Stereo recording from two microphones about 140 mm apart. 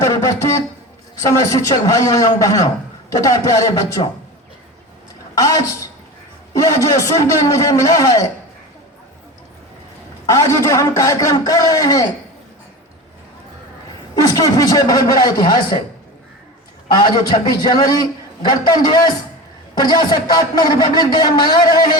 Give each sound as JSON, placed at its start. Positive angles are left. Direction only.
{"t": 0.0, "sound": "a man's voice", "side_deg": 20}
{"t": 5.4, "sound": "a woman's voice", "side_deg": 25}
{"t": 10.2, "sound": "a man's voice", "side_deg": 25}
{"t": 14.2, "sound": "a man's voice", "side_deg": 25}
{"t": 16.9, "sound": "a man's voice", "side_deg": 30}